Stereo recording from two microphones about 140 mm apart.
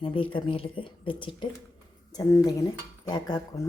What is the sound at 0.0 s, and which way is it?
Speech, 40° left (ahead or behind).